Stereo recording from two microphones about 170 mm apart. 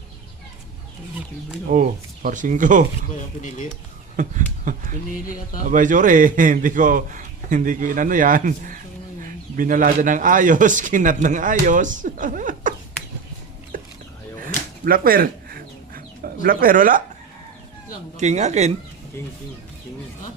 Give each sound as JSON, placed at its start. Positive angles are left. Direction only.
{"t": 1.7, "sound": "a man's voice", "side_deg": -50}
{"t": 3.2, "sound": "speech", "side_deg": 50}
{"t": 4.2, "sound": "a man's voice", "side_deg": -50}
{"t": 14.4, "sound": "a sound", "side_deg": -55}
{"t": 16.2, "sound": "speech", "side_deg": -60}
{"t": 18.2, "sound": "speech", "side_deg": -40}